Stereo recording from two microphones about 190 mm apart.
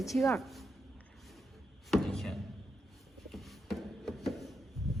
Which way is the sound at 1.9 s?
Centre (ahead or behind).